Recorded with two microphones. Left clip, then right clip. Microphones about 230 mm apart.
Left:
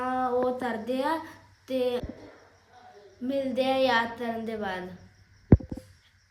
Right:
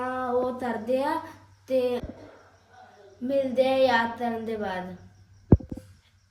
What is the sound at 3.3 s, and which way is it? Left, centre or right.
A woman's voice, centre.